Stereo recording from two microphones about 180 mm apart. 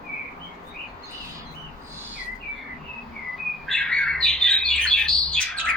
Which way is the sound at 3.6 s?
5° left (ahead or behind).